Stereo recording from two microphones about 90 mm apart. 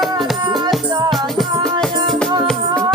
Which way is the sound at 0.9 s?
50° right (ahead or behind).